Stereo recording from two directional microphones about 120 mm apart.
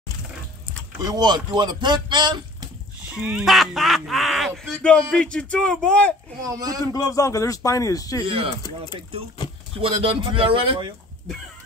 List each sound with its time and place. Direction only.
1.0 s speech: 35° right (ahead or behind)
3.1 s speech: 5° right (ahead or behind); by 6.1 s 10° left (ahead or behind)
6.4 s speech: 30° right (ahead or behind)
6.9 s a man's voice: 30° left (ahead or behind)
8.2 s speech: 45° right (ahead or behind)
9.8 s speech: 45° right (ahead or behind)